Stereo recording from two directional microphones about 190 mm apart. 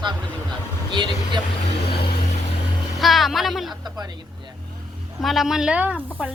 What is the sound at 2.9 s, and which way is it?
Speech, centre (ahead or behind).